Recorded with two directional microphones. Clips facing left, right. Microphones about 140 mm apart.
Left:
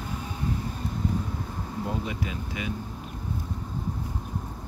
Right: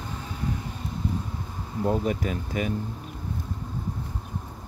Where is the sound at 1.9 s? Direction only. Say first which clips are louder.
Right 9 dB; 45° right (ahead or behind).